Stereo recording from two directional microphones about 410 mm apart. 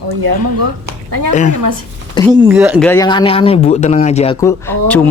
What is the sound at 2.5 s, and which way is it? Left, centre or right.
Speech, centre.